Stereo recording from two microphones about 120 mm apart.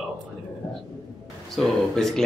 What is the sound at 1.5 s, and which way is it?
Speech, 5° left (ahead or behind).